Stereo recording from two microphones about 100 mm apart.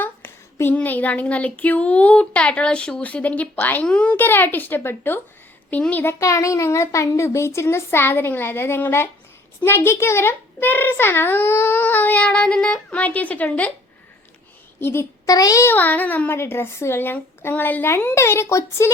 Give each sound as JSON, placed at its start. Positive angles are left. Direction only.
{"t": 0.0, "sound": "a sound", "side_deg": 20}
{"t": 5.7, "sound": "a child's voice", "side_deg": 15}
{"t": 14.8, "sound": "a child's voice", "side_deg": 25}
{"t": 15.3, "sound": "a child's voice", "side_deg": 35}
{"t": 15.6, "sound": "a child's voice", "side_deg": 20}